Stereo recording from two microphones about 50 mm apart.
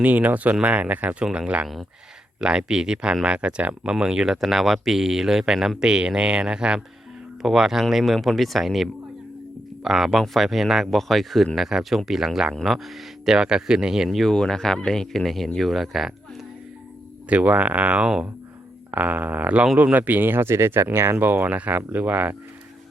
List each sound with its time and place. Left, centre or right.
0.0 s speech: right; by 6.8 s centre
7.4 s speech: centre
14.3 s speech: centre
17.2 s speech: right
18.0 s speech: centre
18.9 s speech: right
21.2 s speech: right
21.5 s speech: right